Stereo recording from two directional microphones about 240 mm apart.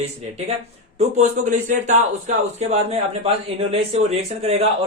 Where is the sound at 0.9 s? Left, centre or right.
Right.